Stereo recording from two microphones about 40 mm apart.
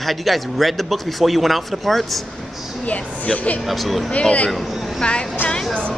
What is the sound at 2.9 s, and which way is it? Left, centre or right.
Speech, left.